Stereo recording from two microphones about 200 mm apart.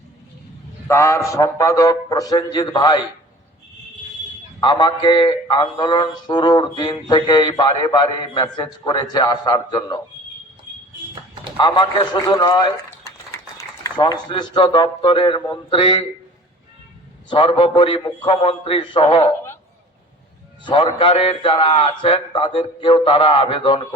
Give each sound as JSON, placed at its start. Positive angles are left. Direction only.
{"t": 0.9, "sound": "a man's voice", "side_deg": 15}
{"t": 4.6, "sound": "mantra", "side_deg": 20}
{"t": 11.5, "sound": "mantra", "side_deg": 25}
{"t": 17.2, "sound": "mantra", "side_deg": 25}
{"t": 20.7, "sound": "mantra", "side_deg": 25}